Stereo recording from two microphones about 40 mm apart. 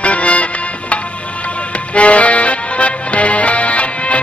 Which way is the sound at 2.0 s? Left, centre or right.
Left.